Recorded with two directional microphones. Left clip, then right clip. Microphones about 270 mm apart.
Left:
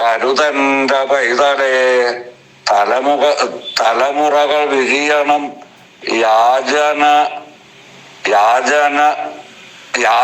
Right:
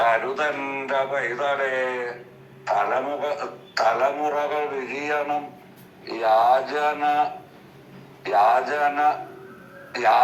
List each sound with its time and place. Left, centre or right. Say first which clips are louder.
0.0 s a man's voice: left 8 dB; left